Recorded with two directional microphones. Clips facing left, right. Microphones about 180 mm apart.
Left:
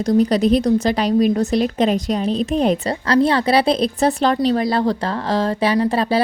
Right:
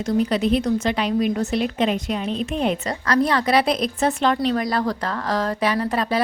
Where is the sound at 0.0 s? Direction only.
40° left (ahead or behind).